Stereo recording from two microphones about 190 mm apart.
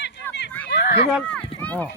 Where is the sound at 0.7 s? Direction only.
65° left (ahead or behind).